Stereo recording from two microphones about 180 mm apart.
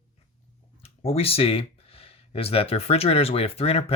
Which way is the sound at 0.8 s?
35° left (ahead or behind).